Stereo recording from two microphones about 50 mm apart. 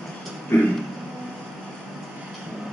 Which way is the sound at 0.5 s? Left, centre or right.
Left.